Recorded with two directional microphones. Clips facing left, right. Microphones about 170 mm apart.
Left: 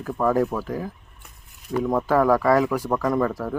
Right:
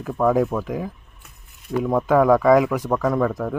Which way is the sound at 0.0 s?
5° right (ahead or behind).